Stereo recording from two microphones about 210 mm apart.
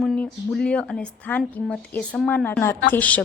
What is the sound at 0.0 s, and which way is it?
A woman's voice, centre (ahead or behind).